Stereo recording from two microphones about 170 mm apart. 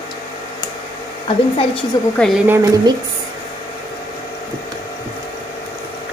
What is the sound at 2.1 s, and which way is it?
Speech, centre (ahead or behind).